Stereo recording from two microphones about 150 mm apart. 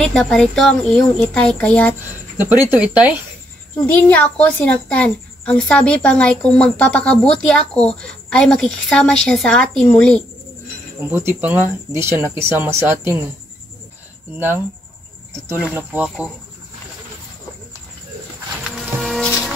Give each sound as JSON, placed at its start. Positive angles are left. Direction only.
{"t": 0.0, "sound": "speech", "side_deg": 5}
{"t": 2.3, "sound": "speech", "side_deg": -15}
{"t": 3.7, "sound": "a woman's voice", "side_deg": 10}
{"t": 11.1, "sound": "speech", "side_deg": -15}
{"t": 15.7, "sound": "speech", "side_deg": -10}
{"t": 18.8, "sound": "music", "side_deg": 0}